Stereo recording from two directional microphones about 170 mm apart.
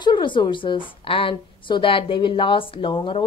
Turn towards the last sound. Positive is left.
turn(degrees=30)  # may be behind; listen again after turning